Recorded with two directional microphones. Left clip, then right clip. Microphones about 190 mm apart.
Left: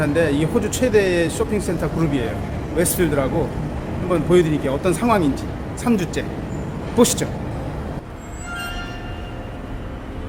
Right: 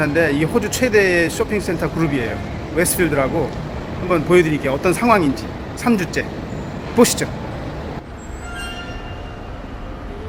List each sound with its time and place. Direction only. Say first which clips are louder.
0.0 s speech: right 2 dB; 15° right (ahead or behind)